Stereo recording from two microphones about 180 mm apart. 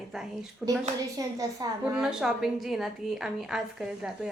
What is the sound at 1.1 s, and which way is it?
Speech, 20° right (ahead or behind).